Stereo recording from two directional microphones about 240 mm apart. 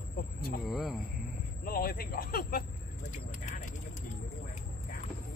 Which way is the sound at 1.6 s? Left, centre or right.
Left.